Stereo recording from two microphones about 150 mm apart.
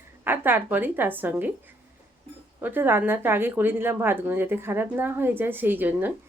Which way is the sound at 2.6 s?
15° right (ahead or behind).